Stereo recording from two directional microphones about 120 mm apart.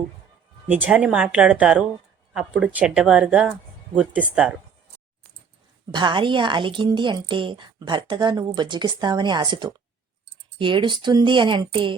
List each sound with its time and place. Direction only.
0.7 s speech: 15° right (ahead or behind)
5.9 s a woman's voice: 40° right (ahead or behind)